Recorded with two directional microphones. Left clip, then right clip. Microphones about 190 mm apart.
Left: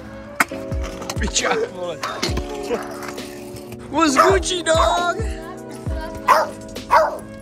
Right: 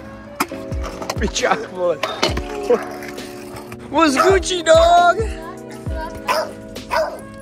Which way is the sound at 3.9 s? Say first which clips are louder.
Right 1 dB; 5° left (ahead or behind).